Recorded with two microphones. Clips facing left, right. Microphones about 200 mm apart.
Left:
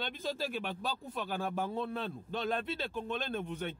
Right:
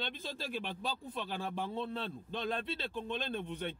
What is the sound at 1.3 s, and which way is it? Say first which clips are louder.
Speech: left 4 dB; 50° left (ahead or behind).